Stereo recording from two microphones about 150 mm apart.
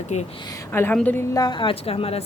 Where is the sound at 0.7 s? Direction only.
10° left (ahead or behind).